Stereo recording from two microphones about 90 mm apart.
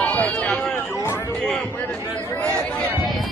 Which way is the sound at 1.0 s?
30° left (ahead or behind).